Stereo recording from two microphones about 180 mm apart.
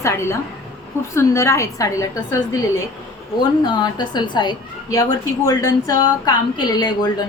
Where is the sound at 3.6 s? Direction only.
25° left (ahead or behind).